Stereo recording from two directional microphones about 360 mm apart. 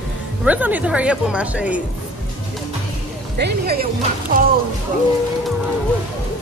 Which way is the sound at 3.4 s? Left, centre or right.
Right.